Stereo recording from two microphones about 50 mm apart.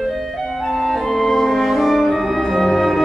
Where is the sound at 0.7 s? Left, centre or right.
Centre.